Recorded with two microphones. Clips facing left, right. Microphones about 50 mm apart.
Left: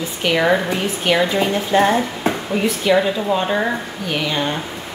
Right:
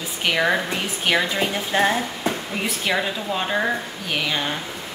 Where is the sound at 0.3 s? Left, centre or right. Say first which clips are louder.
Left 4 dB; centre.